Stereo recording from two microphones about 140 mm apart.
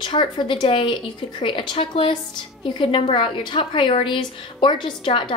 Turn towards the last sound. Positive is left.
turn(degrees=35)  # may be behind; listen again after turning